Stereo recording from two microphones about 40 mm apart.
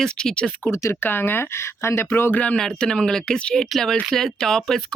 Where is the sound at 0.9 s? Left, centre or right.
Left.